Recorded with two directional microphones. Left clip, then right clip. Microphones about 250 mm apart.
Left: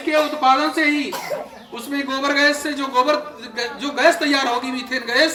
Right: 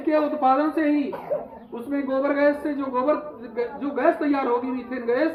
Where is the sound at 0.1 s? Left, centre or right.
Centre.